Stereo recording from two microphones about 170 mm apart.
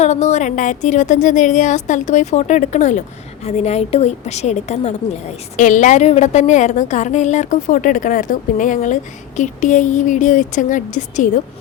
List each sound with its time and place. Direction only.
0.0 s a woman's voice: 40° left (ahead or behind)